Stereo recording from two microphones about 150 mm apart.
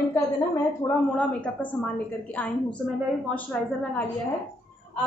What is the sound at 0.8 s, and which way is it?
Speech, 10° left (ahead or behind).